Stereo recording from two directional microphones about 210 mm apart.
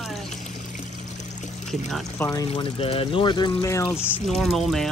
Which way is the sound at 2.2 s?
15° left (ahead or behind).